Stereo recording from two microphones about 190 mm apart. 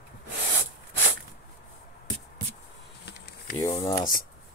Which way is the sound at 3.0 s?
60° left (ahead or behind).